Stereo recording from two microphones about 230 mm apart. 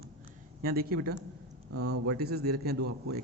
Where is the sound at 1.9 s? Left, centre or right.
Right.